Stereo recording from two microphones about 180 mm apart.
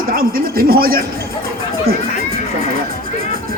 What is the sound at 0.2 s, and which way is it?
Speech, 55° right (ahead or behind).